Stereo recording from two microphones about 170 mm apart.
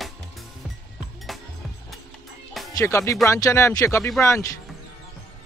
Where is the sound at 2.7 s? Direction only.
15° left (ahead or behind).